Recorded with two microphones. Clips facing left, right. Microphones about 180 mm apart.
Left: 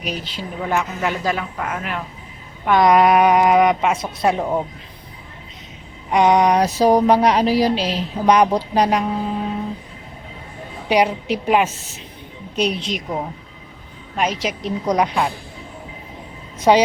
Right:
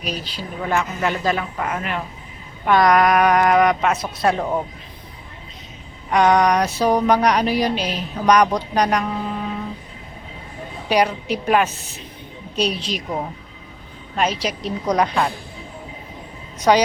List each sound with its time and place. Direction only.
0.0 s a woman's voice: 20° left (ahead or behind)
0.6 s speech: 5° left (ahead or behind)
2.8 s a woman's voice: 25° left (ahead or behind)
4.3 s a woman's voice: 10° left (ahead or behind)
6.1 s a woman's voice: 20° left (ahead or behind)
6.7 s a woman's voice: 35° left (ahead or behind)
10.8 s a woman's voice: 20° left (ahead or behind)
14.2 s a woman's voice: 15° left (ahead or behind)
16.6 s a woman's voice: 25° left (ahead or behind)